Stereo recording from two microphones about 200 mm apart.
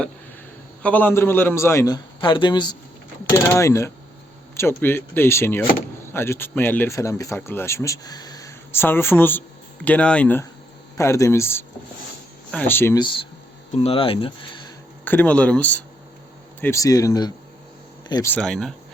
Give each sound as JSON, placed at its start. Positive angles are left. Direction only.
{"t": 0.8, "sound": "speech", "side_deg": 5}
{"t": 13.0, "sound": "speech", "side_deg": 25}
{"t": 15.0, "sound": "speech", "side_deg": 10}
{"t": 18.3, "sound": "speech", "side_deg": 0}